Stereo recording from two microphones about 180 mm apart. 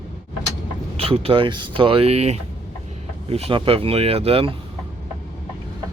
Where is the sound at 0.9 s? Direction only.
30° right (ahead or behind).